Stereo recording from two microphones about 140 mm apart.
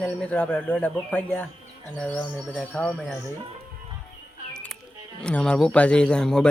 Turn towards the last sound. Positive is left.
turn(degrees=5)  # may be behind; listen again after turning